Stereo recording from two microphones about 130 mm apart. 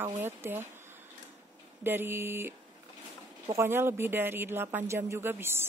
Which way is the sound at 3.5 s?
20° right (ahead or behind).